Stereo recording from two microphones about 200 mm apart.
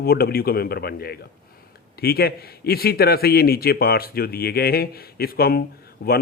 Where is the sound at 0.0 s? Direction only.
50° left (ahead or behind).